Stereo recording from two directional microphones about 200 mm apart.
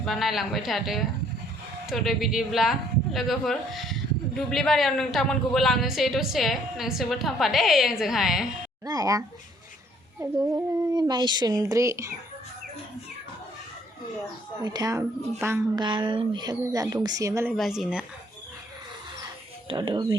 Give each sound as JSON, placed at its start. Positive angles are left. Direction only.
{"t": 0.0, "sound": "a woman's voice", "side_deg": 0}
{"t": 8.8, "sound": "speech", "side_deg": -20}
{"t": 10.9, "sound": "speech", "side_deg": -20}
{"t": 14.6, "sound": "speech", "side_deg": -20}
{"t": 15.8, "sound": "speech", "side_deg": -25}
{"t": 17.6, "sound": "a woman's voice", "side_deg": 0}
{"t": 19.6, "sound": "speech", "side_deg": -25}